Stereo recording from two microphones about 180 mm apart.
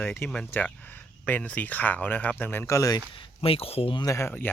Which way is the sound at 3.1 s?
30° left (ahead or behind).